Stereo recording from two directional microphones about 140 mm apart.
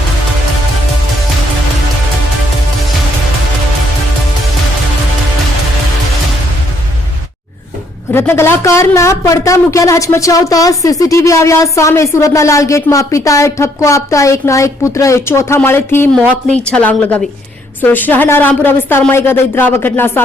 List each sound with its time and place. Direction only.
8.1 s a woman's voice: 15° left (ahead or behind)